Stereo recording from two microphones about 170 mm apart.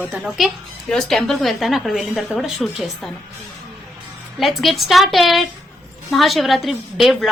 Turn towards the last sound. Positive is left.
turn(degrees=0)  # may be behind; listen again after turning